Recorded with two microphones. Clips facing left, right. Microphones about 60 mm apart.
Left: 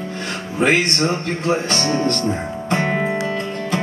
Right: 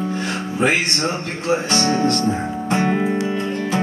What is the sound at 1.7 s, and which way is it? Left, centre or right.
Music, centre.